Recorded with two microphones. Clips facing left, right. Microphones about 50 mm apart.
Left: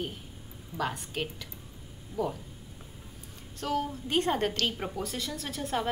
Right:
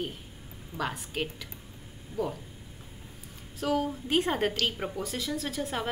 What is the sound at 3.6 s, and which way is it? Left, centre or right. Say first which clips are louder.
A woman's voice: right 2 dB; centre.